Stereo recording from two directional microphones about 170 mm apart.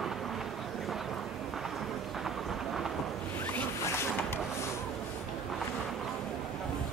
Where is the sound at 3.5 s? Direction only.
10° left (ahead or behind).